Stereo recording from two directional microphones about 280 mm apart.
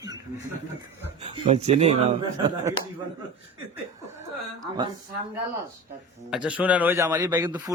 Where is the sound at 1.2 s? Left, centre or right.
Right.